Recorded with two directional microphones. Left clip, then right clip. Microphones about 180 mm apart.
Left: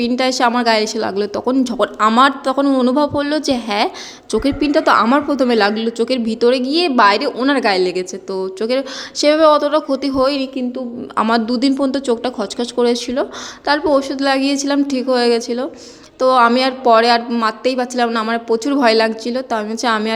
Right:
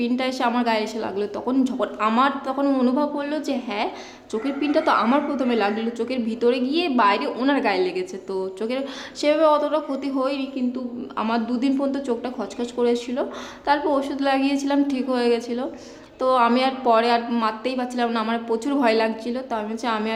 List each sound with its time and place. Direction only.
0.2 s a woman's voice: 30° left (ahead or behind)